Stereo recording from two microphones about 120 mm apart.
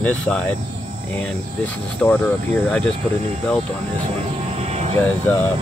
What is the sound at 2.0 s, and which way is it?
Speech, 10° left (ahead or behind).